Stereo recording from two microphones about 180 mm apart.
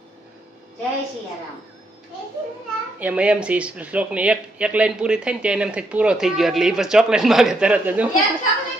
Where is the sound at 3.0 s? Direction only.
10° right (ahead or behind).